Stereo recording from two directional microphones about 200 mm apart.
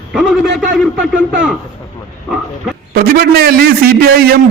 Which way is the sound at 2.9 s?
50° right (ahead or behind).